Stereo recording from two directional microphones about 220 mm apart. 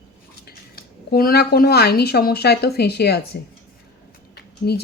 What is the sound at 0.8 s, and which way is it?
Speech, 45° left (ahead or behind).